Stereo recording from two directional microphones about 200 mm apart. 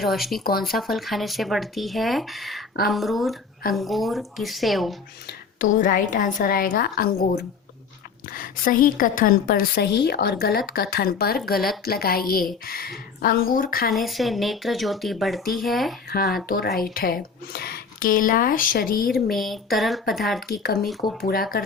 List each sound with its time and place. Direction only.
0.0 s speech: centre (ahead or behind)
5.5 s a woman's voice: 40° left (ahead or behind)
13.9 s speech: centre (ahead or behind)
16.0 s a woman's voice: 50° left (ahead or behind)
19.1 s speech: centre (ahead or behind)
20.5 s a woman's voice: 50° left (ahead or behind)